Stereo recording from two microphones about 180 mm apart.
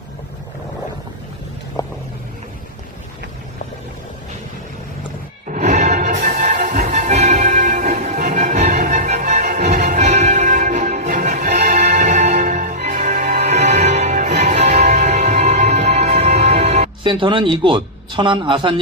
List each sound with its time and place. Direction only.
1.8 s vehicle: 20° left (ahead or behind)
5.5 s music: 45° right (ahead or behind)
6.9 s music: 40° right (ahead or behind)
17.0 s a man's voice: 25° right (ahead or behind)